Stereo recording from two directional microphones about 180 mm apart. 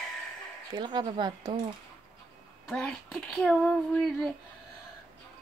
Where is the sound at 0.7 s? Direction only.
25° right (ahead or behind).